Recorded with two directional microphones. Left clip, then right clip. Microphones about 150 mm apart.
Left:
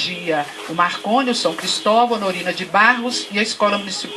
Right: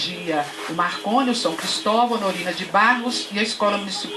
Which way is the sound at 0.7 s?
15° left (ahead or behind).